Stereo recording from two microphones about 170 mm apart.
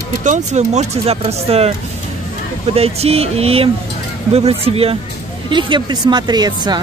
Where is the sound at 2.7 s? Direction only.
35° right (ahead or behind).